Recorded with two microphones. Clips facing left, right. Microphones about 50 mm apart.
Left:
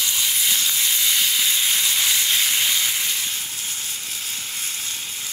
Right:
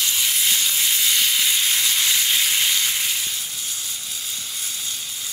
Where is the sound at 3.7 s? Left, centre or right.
Left.